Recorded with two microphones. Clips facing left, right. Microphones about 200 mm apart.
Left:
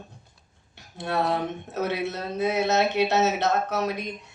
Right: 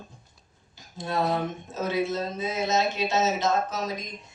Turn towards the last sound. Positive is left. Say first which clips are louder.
# left 4 dB
turn(degrees=65)  # may be behind; listen again after turning